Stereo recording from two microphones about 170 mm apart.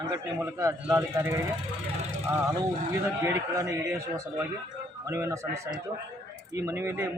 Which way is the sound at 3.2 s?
15° right (ahead or behind).